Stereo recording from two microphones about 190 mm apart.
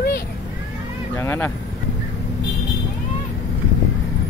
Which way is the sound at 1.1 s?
15° left (ahead or behind).